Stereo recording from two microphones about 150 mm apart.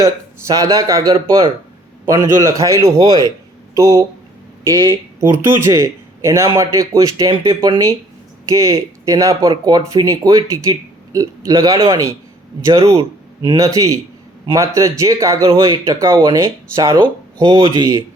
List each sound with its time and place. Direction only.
0.0 s speech: 20° right (ahead or behind)
3.1 s speech: 25° left (ahead or behind)
3.8 s speech: 20° right (ahead or behind)
4.7 s speech: 30° right (ahead or behind)
5.2 s speech: 15° right (ahead or behind)
13.0 s a sound: 35° right (ahead or behind)
13.6 s speech: 20° right (ahead or behind)